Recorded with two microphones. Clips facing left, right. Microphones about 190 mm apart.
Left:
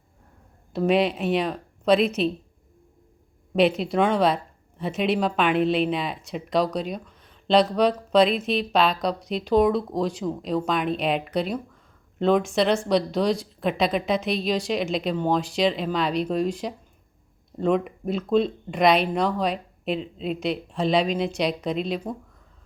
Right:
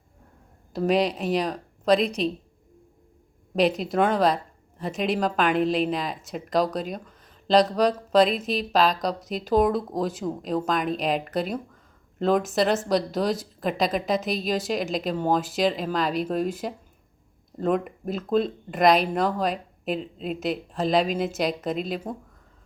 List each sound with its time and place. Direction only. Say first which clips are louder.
0.7 s speech: left 1 dB; centre (ahead or behind)
3.5 s speech: left 2 dB; centre (ahead or behind)